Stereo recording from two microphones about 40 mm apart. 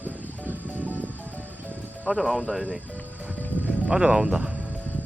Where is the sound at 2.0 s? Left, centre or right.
Centre.